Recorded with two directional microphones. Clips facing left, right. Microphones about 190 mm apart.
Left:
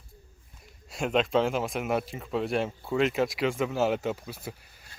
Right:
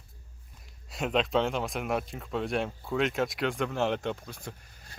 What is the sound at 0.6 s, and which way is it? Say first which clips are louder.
Speech: left 2 dB; centre (ahead or behind).